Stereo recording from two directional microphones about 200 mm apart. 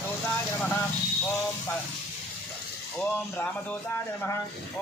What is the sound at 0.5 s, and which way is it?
Speech, 5° left (ahead or behind).